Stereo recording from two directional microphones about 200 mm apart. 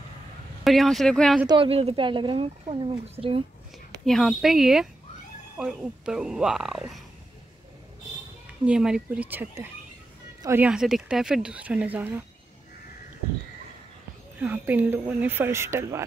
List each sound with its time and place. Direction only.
0.7 s speech: centre (ahead or behind)
1.5 s a woman's voice: 30° right (ahead or behind)
4.0 s speech: centre (ahead or behind)
8.6 s speech: 5° right (ahead or behind)
14.4 s speech: 10° right (ahead or behind)